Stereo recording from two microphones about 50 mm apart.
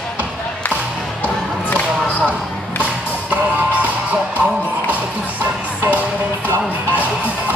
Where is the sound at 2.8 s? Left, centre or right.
Right.